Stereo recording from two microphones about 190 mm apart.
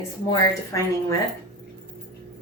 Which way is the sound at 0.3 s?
20° left (ahead or behind).